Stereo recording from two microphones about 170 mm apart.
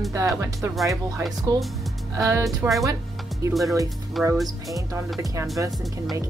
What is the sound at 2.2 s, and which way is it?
A woman's voice, 20° right (ahead or behind).